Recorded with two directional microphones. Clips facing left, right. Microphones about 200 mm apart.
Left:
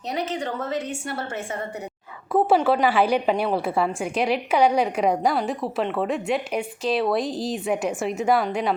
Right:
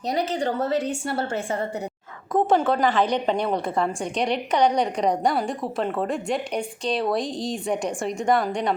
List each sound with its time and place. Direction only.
0.1 s a woman's voice: 35° right (ahead or behind)
2.3 s a woman's voice: 10° left (ahead or behind)